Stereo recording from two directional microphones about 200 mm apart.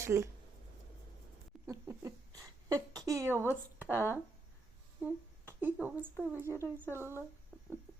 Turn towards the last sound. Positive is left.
turn(degrees=-10)  # may be behind; listen again after turning